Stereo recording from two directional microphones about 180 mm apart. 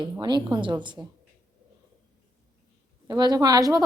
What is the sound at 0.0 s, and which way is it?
A woman's voice, 25° right (ahead or behind).